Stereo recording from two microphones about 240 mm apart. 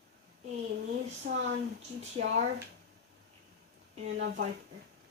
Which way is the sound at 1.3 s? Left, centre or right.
Right.